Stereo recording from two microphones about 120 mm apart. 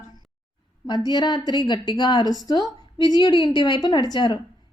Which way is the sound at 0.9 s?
40° left (ahead or behind).